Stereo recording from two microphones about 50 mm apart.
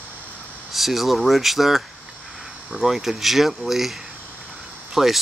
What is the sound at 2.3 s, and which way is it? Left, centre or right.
Cricket, centre.